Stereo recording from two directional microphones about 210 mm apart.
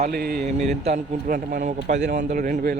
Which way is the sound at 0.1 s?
45° right (ahead or behind).